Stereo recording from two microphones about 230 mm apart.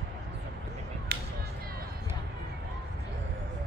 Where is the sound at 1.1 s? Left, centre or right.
Right.